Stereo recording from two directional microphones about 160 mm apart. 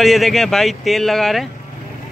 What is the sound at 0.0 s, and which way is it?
Speech, centre (ahead or behind).